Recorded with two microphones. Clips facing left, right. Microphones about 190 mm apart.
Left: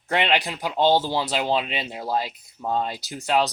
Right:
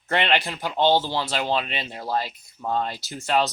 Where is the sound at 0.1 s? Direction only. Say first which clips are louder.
Even; 10° left (ahead or behind).